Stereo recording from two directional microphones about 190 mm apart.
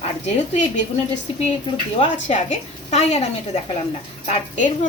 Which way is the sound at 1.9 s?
35° left (ahead or behind).